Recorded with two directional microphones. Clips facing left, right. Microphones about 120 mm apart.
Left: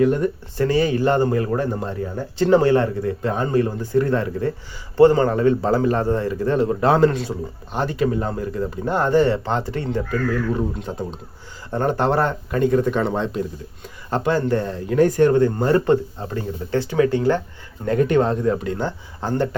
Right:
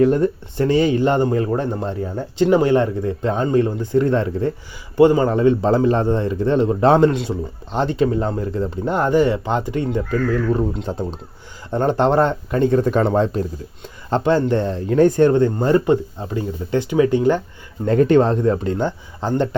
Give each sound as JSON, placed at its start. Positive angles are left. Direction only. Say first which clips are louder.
{"t": 0.0, "sound": "speech", "louder": "right 3 dB", "side_deg": -30}
{"t": 10.8, "sound": "speech", "louder": "right 3 dB", "side_deg": -30}
{"t": 14.1, "sound": "speech", "louder": "right 3 dB", "side_deg": -25}
{"t": 17.8, "sound": "speech", "louder": "right 4 dB", "side_deg": -30}
{"t": 18.8, "sound": "speech", "louder": "right 3 dB", "side_deg": -20}